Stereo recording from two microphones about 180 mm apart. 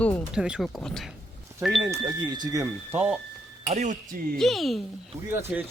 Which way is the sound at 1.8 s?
20° right (ahead or behind).